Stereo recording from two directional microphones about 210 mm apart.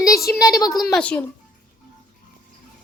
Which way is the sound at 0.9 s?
5° left (ahead or behind).